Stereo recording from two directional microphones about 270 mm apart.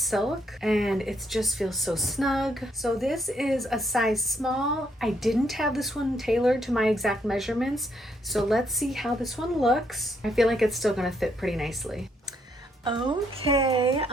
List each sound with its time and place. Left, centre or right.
0.0 s speech: centre
12.8 s a woman's voice: centre